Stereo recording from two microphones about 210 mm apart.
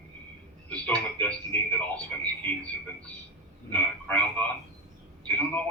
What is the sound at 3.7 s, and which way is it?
A man's voice, 5° left (ahead or behind).